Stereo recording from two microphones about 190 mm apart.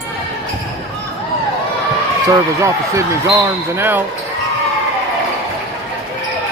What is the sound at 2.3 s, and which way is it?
Speech, 15° right (ahead or behind).